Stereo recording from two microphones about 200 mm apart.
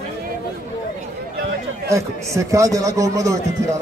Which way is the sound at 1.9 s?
15° right (ahead or behind).